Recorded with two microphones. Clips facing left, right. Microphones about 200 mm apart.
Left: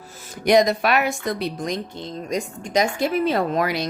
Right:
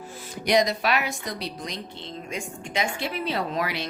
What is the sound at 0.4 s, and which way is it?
Speech, 50° left (ahead or behind).